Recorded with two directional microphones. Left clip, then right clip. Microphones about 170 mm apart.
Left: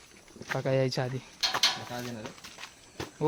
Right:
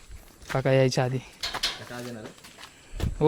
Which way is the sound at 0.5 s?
65° right (ahead or behind).